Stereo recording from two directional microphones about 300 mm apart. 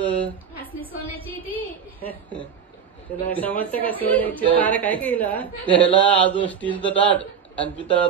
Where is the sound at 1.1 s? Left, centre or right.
Centre.